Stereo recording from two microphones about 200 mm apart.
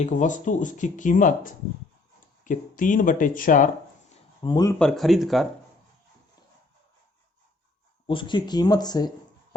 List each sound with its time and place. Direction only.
0.0 s speech: 40° left (ahead or behind)
2.4 s speech: 40° left (ahead or behind)
4.4 s speech: 20° left (ahead or behind)
4.8 s speech: centre (ahead or behind)
8.0 s speech: 25° left (ahead or behind)